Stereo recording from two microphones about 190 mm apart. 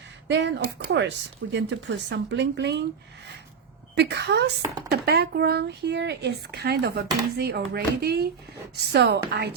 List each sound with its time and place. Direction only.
0.3 s speech: 65° right (ahead or behind)
3.9 s speech: 60° right (ahead or behind)